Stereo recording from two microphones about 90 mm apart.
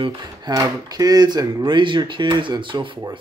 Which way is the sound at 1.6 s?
60° right (ahead or behind).